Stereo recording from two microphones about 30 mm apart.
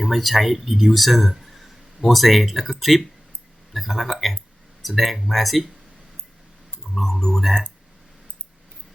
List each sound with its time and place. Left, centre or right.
0.1 s speech: centre
7.1 s speech: centre